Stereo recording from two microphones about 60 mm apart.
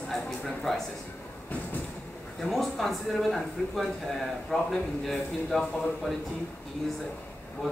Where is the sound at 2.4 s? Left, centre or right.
Centre.